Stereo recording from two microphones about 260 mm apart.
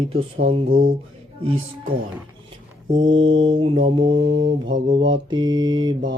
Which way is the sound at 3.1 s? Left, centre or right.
Right.